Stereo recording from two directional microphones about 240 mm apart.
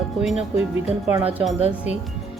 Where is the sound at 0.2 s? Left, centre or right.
Centre.